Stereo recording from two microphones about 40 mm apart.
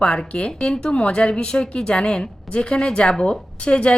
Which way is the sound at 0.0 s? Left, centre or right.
Left.